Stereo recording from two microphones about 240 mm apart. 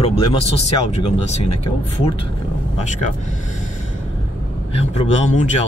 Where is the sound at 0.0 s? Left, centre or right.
Left.